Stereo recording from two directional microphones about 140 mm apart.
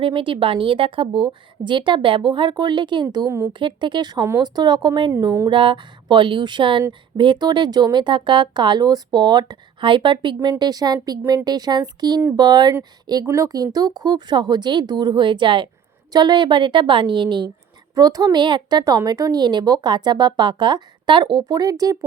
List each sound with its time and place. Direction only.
0.0 s a woman's voice: 35° right (ahead or behind)
3.2 s speech: 20° right (ahead or behind)
3.6 s a woman's voice: 35° right (ahead or behind)